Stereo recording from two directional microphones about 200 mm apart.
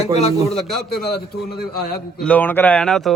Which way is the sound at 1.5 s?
55° left (ahead or behind).